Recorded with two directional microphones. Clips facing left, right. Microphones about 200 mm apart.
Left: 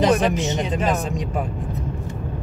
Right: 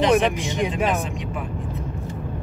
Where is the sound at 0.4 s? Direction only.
10° right (ahead or behind).